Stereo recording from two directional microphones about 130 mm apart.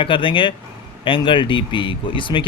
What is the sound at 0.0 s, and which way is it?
Speech, 40° left (ahead or behind).